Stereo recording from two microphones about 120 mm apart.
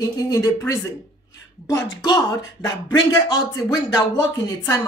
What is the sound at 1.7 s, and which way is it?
Speech, 35° left (ahead or behind).